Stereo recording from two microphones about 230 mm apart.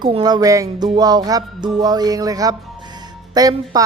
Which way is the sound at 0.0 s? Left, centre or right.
Centre.